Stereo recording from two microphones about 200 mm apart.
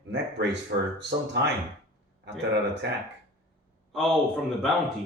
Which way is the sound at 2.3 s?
60° right (ahead or behind).